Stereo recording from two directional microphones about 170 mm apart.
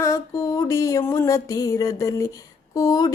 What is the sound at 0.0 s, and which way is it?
Music, 15° left (ahead or behind).